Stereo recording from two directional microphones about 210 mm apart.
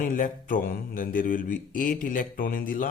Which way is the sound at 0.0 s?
40° left (ahead or behind).